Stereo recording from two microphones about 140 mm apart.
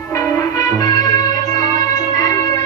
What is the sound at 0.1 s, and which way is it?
Music, 20° left (ahead or behind).